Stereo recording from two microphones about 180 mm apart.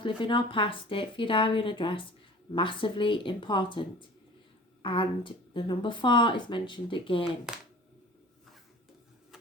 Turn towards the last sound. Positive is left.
turn(degrees=-5)  # may be behind; listen again after turning